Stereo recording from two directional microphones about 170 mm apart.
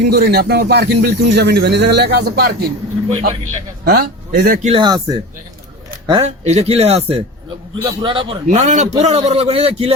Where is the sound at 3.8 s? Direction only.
70° right (ahead or behind).